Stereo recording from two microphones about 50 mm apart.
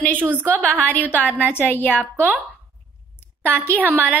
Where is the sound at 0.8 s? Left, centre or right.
Left.